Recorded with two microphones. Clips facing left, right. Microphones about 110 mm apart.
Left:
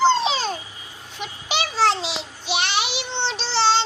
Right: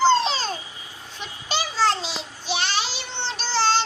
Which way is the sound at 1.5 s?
70° left (ahead or behind).